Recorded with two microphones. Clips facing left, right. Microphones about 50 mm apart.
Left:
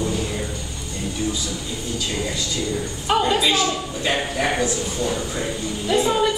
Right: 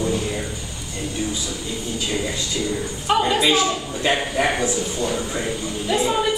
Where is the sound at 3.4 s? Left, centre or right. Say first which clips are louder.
Right 1 dB; centre.